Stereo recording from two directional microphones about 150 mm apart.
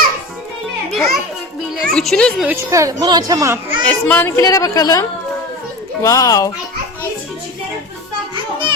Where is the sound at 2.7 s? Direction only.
20° right (ahead or behind).